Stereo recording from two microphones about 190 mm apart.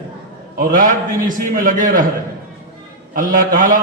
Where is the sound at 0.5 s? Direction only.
50° right (ahead or behind).